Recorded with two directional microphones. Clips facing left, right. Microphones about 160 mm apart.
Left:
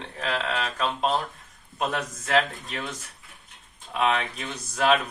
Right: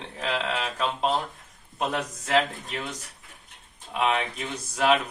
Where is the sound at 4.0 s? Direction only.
15° right (ahead or behind).